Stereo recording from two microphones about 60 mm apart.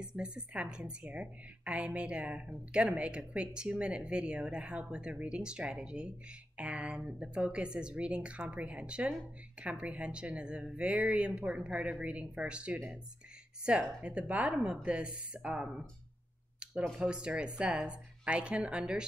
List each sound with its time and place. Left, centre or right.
0.0 s a woman's voice: centre
17.0 s a woman's voice: centre